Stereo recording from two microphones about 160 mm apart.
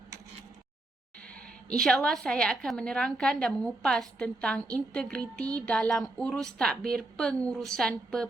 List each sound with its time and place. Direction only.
1.3 s a woman's voice: 5° left (ahead or behind)